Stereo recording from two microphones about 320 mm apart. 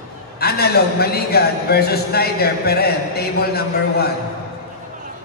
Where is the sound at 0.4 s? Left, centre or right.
Left.